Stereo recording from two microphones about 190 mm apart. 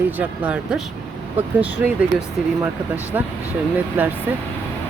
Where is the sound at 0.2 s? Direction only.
5° right (ahead or behind).